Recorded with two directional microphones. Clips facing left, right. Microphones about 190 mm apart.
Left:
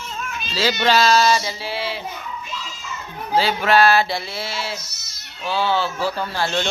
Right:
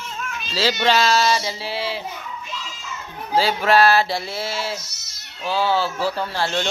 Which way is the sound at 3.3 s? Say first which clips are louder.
Even; 35° right (ahead or behind).